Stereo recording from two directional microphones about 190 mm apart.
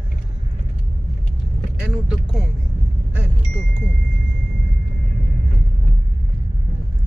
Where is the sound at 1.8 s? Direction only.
5° right (ahead or behind).